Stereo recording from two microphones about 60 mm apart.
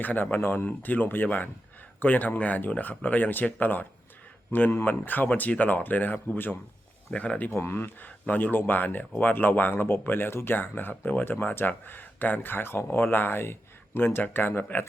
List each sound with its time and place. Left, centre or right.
0.0 s speech: left
4.9 s speech: left
7.1 s speech: left
7.5 s speech: left
8.0 s speech: left